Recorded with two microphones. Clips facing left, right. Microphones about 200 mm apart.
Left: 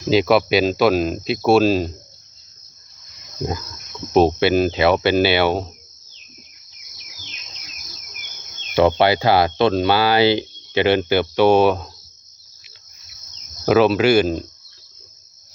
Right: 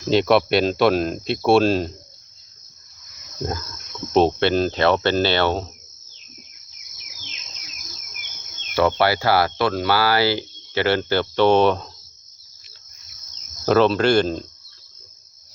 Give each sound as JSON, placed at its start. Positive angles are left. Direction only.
{"t": 0.1, "sound": "speech", "side_deg": 0}
{"t": 4.1, "sound": "cricket", "side_deg": 5}
{"t": 8.7, "sound": "speech", "side_deg": 20}
{"t": 13.7, "sound": "cricket", "side_deg": 5}